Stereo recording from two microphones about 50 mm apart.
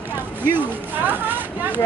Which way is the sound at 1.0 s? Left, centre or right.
Right.